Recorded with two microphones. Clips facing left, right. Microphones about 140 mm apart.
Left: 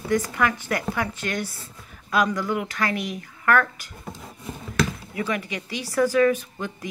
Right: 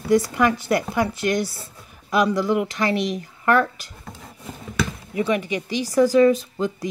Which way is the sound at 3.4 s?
20° right (ahead or behind).